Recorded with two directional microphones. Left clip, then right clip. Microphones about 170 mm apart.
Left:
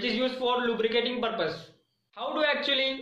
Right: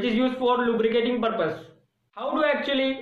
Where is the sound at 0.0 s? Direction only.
15° left (ahead or behind).